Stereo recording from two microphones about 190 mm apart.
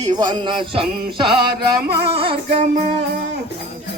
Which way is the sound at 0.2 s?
25° right (ahead or behind).